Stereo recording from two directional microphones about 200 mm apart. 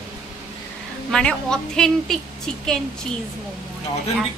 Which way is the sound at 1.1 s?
5° left (ahead or behind).